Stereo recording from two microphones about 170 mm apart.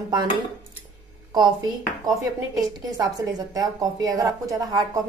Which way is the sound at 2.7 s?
20° right (ahead or behind).